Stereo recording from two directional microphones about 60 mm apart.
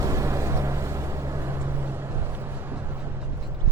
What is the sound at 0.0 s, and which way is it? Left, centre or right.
Vehicle, right.